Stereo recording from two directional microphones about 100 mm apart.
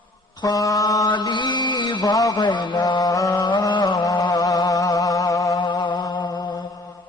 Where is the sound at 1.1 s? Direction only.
50° left (ahead or behind).